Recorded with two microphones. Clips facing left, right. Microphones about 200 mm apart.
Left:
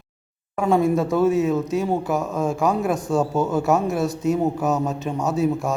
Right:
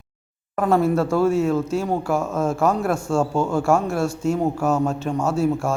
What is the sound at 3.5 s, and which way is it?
A man's voice, 20° left (ahead or behind).